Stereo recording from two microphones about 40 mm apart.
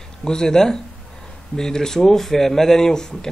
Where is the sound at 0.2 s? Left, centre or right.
Centre.